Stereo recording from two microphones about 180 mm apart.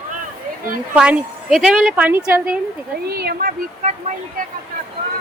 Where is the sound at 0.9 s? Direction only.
5° right (ahead or behind).